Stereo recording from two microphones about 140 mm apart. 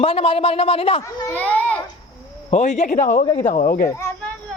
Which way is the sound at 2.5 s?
55° left (ahead or behind).